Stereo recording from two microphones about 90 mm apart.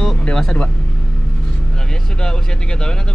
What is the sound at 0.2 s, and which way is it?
Vehicle, 10° left (ahead or behind).